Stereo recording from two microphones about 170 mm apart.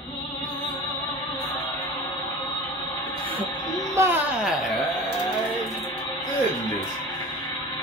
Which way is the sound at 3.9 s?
15° right (ahead or behind).